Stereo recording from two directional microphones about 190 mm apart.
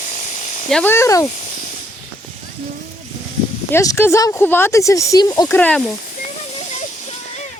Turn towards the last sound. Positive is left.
turn(degrees=35)  # may be behind; listen again after turning